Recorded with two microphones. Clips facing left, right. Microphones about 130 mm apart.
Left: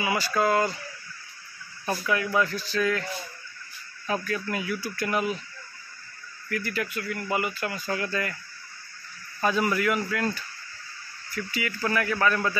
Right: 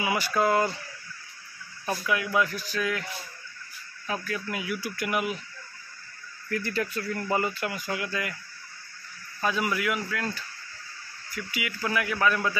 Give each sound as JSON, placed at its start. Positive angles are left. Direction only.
{"t": 0.0, "sound": "speech", "side_deg": -20}
{"t": 2.0, "sound": "speech", "side_deg": -10}
{"t": 4.1, "sound": "speech", "side_deg": -5}
{"t": 6.5, "sound": "speech", "side_deg": -25}
{"t": 7.5, "sound": "speech", "side_deg": -15}
{"t": 9.4, "sound": "a man's voice", "side_deg": 0}
{"t": 11.3, "sound": "speech", "side_deg": -10}